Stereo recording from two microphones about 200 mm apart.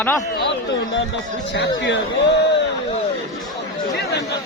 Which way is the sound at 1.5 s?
60° left (ahead or behind).